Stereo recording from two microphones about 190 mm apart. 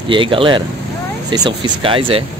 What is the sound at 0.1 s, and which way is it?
Speech, 25° right (ahead or behind).